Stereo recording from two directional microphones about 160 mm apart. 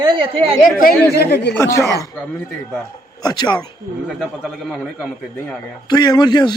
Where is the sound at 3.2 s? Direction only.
25° left (ahead or behind).